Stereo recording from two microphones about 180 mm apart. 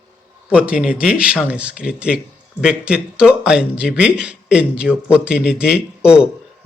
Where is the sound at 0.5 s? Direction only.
5° right (ahead or behind).